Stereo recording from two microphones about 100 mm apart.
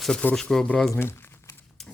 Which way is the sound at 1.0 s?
25° left (ahead or behind).